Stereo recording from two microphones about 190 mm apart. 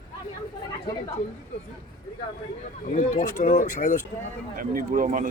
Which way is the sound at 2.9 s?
40° left (ahead or behind).